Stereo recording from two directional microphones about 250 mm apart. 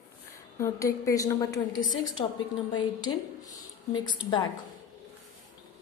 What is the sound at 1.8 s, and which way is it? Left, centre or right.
Speech, left.